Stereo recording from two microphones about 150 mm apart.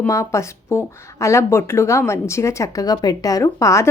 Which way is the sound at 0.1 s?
20° left (ahead or behind).